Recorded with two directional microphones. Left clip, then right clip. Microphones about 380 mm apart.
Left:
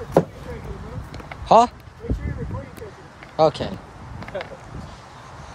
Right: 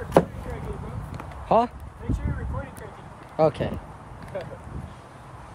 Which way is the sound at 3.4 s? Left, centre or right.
Centre.